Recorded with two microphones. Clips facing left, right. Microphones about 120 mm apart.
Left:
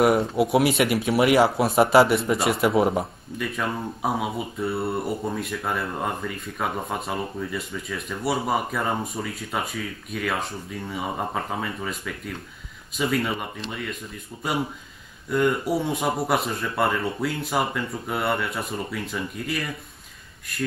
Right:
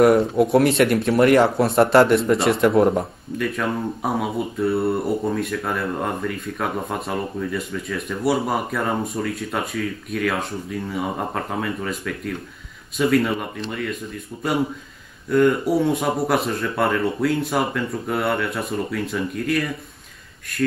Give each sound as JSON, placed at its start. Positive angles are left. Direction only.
{"t": 0.0, "sound": "speech", "side_deg": 0}